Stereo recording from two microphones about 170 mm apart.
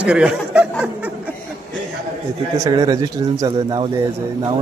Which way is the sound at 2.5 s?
20° right (ahead or behind).